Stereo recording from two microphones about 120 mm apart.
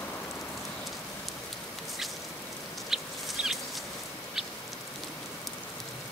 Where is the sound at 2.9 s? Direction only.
5° right (ahead or behind).